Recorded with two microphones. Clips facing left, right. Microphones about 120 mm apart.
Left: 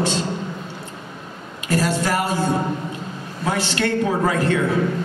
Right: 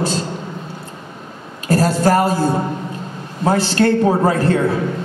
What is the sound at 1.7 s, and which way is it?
A woman's voice, 35° right (ahead or behind).